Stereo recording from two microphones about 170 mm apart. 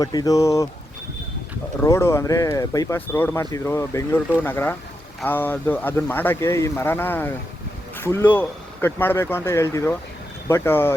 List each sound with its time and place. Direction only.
0.0 s speech: 20° left (ahead or behind)
1.8 s speech: 15° left (ahead or behind)